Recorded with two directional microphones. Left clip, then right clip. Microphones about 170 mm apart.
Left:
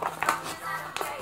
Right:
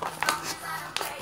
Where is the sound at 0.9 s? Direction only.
Centre (ahead or behind).